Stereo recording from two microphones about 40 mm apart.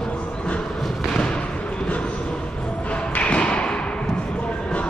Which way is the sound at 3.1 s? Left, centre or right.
Left.